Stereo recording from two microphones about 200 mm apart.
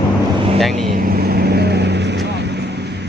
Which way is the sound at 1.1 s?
50° right (ahead or behind).